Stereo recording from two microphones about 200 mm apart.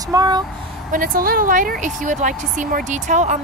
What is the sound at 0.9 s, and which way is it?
Speech, 45° right (ahead or behind).